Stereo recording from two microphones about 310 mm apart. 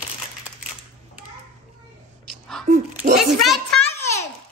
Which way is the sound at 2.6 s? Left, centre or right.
Right.